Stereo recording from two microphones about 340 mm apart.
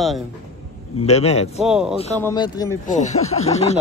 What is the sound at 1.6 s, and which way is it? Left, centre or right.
Speech, centre.